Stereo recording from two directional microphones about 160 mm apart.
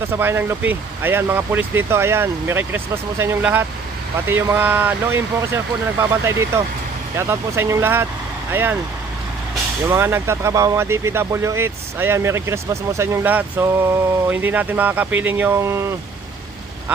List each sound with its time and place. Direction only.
0.1 s speech: 15° right (ahead or behind)
9.9 s speech: 15° right (ahead or behind)